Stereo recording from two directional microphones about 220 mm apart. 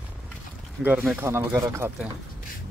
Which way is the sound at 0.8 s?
5° right (ahead or behind).